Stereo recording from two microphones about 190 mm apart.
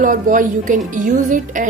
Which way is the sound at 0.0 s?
45° right (ahead or behind).